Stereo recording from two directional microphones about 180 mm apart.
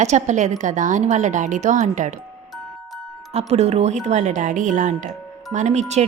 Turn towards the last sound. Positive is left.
turn(degrees=-40)  # may be behind; listen again after turning